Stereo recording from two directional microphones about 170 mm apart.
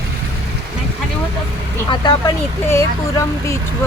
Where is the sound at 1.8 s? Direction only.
25° left (ahead or behind).